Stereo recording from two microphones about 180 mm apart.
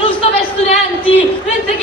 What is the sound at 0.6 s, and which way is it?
Speech, 30° left (ahead or behind).